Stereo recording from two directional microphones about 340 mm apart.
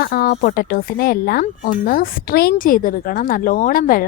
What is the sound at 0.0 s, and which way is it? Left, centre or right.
Speech, left.